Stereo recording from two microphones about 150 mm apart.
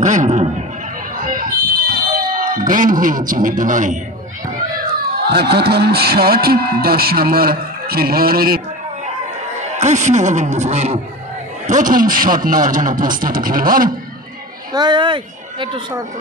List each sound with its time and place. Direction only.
0.0 s a sound: 55° right (ahead or behind)
1.1 s fire alarm: 70° right (ahead or behind)
5.3 s speech: 90° right
9.8 s a man's voice: 50° right (ahead or behind)
11.6 s a man's voice: 60° right (ahead or behind)
14.7 s a woman's voice: 30° right (ahead or behind)